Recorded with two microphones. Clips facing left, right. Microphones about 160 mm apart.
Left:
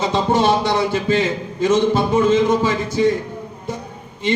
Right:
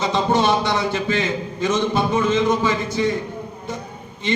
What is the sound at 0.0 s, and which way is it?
A man's voice, 30° left (ahead or behind).